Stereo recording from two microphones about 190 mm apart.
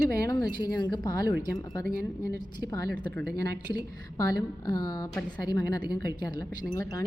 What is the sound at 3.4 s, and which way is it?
A woman's voice, 20° left (ahead or behind).